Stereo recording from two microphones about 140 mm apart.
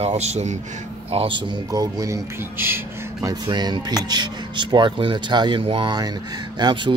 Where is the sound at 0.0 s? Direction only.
50° right (ahead or behind).